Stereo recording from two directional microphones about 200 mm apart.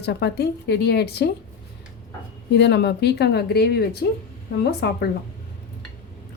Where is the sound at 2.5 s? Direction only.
60° left (ahead or behind).